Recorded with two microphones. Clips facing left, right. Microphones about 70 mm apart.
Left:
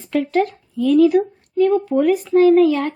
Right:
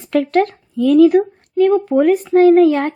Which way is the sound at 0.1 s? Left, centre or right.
Right.